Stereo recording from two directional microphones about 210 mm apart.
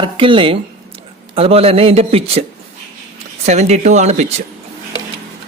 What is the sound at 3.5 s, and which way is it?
Speech, 35° right (ahead or behind).